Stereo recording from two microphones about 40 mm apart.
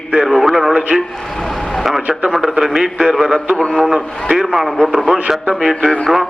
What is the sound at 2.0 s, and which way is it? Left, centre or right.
Speech, right.